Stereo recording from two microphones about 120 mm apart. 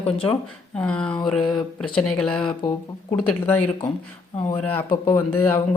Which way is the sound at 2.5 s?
35° left (ahead or behind).